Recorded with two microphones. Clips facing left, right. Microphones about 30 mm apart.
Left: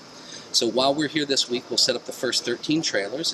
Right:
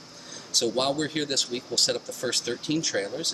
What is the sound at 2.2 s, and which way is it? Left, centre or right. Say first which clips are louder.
Speech: left 3 dB; left.